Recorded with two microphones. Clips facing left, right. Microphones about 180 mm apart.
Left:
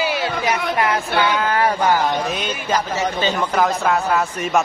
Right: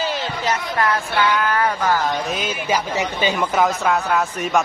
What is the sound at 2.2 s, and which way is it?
Speech, 5° right (ahead or behind).